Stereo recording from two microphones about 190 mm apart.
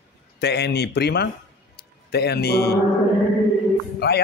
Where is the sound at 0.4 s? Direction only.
60° left (ahead or behind).